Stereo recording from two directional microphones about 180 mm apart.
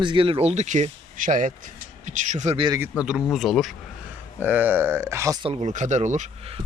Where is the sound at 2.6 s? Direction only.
20° right (ahead or behind).